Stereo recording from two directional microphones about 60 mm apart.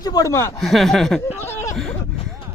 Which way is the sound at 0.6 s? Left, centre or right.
Centre.